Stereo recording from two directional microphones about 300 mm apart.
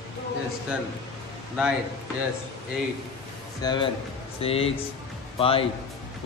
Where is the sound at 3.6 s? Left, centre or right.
Centre.